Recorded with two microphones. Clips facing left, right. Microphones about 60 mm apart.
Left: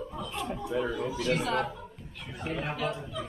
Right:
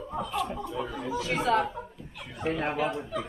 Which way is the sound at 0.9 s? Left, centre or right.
Right.